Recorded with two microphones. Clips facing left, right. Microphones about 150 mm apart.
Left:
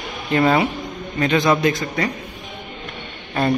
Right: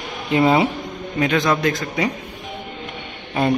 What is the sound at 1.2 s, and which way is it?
Speech, centre (ahead or behind).